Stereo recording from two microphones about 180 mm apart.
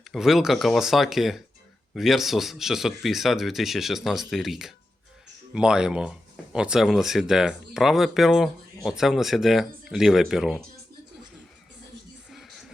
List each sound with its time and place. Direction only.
0.1 s speech: centre (ahead or behind)
12.3 s music: centre (ahead or behind)